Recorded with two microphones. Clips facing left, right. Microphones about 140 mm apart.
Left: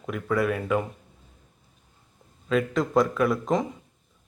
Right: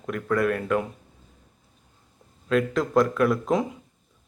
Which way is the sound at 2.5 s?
Centre (ahead or behind).